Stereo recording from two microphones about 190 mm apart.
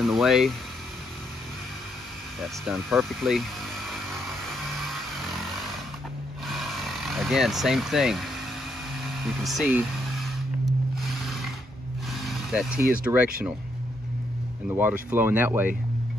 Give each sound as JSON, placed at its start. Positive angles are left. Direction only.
{"t": 0.0, "sound": "speech", "side_deg": 0}
{"t": 2.4, "sound": "speech", "side_deg": 0}
{"t": 6.4, "sound": "vehicle", "side_deg": 0}
{"t": 9.2, "sound": "a sound", "side_deg": 0}
{"t": 12.1, "sound": "vehicle", "side_deg": 0}
{"t": 12.9, "sound": "speech", "side_deg": -10}
{"t": 14.7, "sound": "speech", "side_deg": -10}